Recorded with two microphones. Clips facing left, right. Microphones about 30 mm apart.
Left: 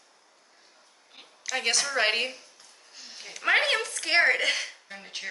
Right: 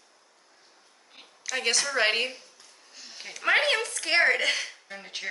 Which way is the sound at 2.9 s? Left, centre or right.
Centre.